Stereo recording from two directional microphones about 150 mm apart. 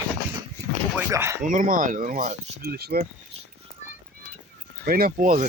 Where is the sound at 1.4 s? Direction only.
65° right (ahead or behind).